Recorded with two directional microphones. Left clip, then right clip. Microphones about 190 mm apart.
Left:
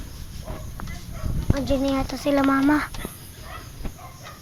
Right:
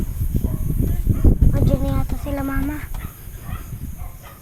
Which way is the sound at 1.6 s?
30° left (ahead or behind).